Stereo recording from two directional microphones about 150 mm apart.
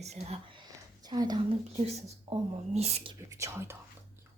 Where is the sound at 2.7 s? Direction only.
45° right (ahead or behind).